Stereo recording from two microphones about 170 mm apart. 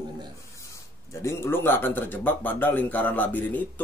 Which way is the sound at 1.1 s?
15° left (ahead or behind).